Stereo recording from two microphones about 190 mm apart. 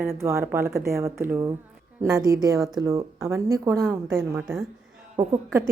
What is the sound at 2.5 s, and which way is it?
Speech, centre (ahead or behind).